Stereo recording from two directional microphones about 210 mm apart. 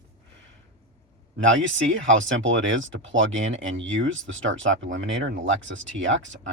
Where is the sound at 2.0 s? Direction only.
65° right (ahead or behind).